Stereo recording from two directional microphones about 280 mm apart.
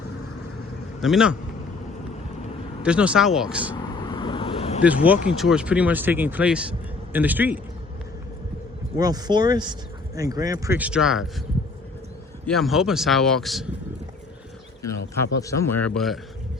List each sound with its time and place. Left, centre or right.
1.0 s speech: centre
2.8 s speech: centre
3.8 s vehicle: centre
4.8 s speech: centre
9.0 s speech: centre
12.5 s speech: centre
15.4 s speech: centre